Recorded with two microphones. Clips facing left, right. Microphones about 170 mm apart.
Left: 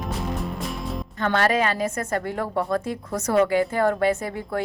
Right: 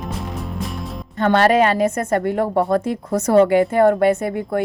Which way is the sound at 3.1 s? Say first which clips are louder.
Right 7 dB; 30° right (ahead or behind).